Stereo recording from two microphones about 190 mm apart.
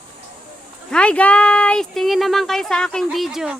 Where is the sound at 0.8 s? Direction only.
5° left (ahead or behind).